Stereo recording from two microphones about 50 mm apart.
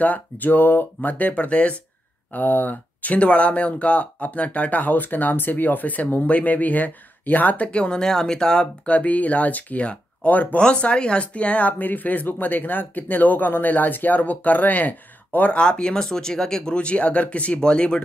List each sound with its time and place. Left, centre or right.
0.0 s speech: left
2.3 s speech: left
10.6 s speech: left
15.6 s speech: centre